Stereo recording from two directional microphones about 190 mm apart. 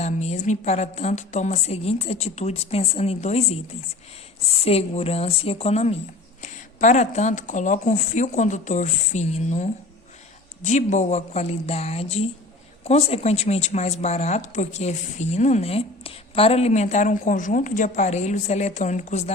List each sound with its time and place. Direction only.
0.0 s a woman's voice: 35° left (ahead or behind)
4.6 s a woman's voice: 35° left (ahead or behind)